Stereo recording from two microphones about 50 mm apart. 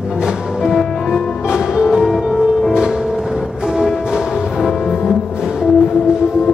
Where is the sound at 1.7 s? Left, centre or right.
Centre.